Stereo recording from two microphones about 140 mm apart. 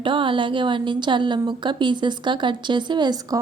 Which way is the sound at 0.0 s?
35° right (ahead or behind).